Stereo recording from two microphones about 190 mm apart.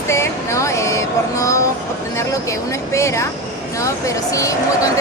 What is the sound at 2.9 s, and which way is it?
Speech, 15° left (ahead or behind).